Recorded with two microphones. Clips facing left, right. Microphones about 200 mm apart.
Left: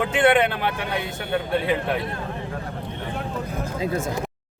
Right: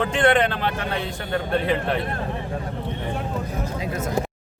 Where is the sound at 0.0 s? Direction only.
10° left (ahead or behind).